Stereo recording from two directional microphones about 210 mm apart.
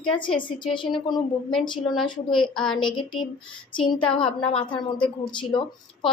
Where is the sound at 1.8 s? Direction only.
Centre (ahead or behind).